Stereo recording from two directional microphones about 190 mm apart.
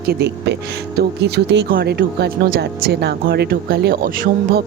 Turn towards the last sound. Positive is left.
turn(degrees=-50)  # may be behind; listen again after turning